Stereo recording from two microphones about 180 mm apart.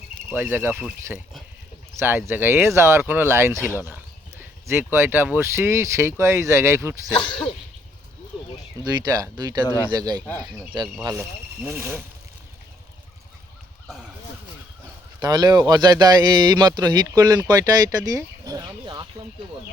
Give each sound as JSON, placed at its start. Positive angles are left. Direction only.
{"t": 0.3, "sound": "speech", "side_deg": -10}
{"t": 7.1, "sound": "speech", "side_deg": 25}
{"t": 8.8, "sound": "speech", "side_deg": -20}
{"t": 9.6, "sound": "speech", "side_deg": 15}
{"t": 9.9, "sound": "speech", "side_deg": -20}
{"t": 15.2, "sound": "speech", "side_deg": -20}
{"t": 18.2, "sound": "chicken", "side_deg": -20}